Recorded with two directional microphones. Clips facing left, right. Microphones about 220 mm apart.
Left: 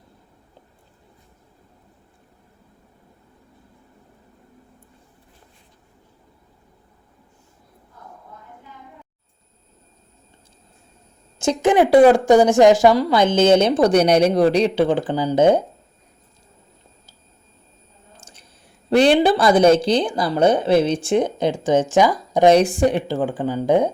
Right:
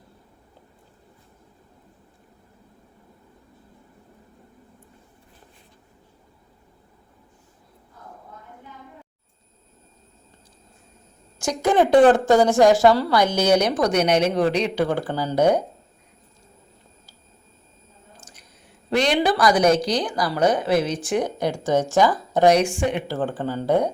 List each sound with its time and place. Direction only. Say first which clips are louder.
11.3 s a woman's voice: left 3 dB; 20° left (ahead or behind)
14.8 s speech: left 5 dB; 15° left (ahead or behind)
18.9 s speech: left 6 dB; 30° left (ahead or behind); by 22.4 s 15° left (ahead or behind)
22.4 s speech: left 4 dB; 35° left (ahead or behind)
23.0 s speech: left 3 dB; 15° left (ahead or behind)